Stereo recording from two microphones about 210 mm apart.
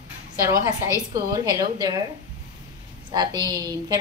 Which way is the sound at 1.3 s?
20° right (ahead or behind).